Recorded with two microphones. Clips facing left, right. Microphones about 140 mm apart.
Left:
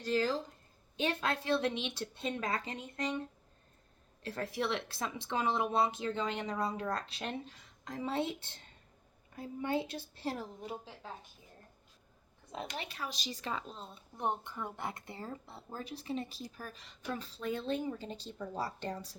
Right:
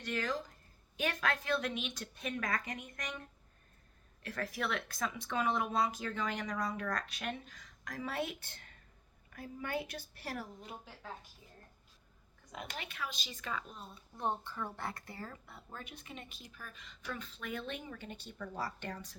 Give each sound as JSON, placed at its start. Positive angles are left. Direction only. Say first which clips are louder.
{"t": 0.0, "sound": "speech", "louder": "left 5 dB", "side_deg": 30}
{"t": 12.5, "sound": "speech", "louder": "left 4 dB", "side_deg": 30}